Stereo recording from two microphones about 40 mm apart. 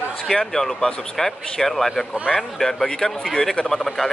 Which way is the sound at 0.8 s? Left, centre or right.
Centre.